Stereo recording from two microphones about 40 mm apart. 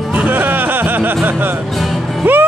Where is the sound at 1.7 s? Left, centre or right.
Centre.